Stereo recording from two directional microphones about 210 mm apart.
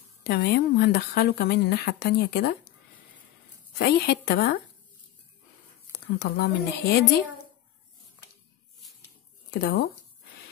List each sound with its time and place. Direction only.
0.2 s speech: 50° left (ahead or behind)
3.7 s speech: 55° left (ahead or behind)
6.1 s speech: 50° left (ahead or behind)
9.5 s speech: 50° left (ahead or behind)